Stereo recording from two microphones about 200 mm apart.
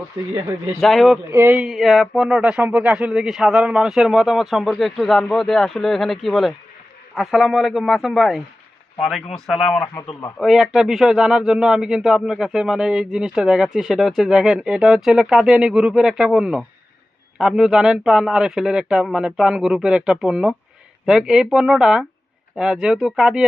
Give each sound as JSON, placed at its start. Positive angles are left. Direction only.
{"t": 0.2, "sound": "speech", "side_deg": -15}
{"t": 0.8, "sound": "speech", "side_deg": 0}
{"t": 9.9, "sound": "a man's voice", "side_deg": 15}
{"t": 10.3, "sound": "speech", "side_deg": 0}